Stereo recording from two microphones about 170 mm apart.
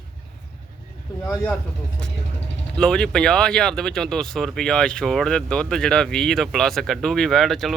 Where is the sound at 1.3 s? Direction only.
15° left (ahead or behind).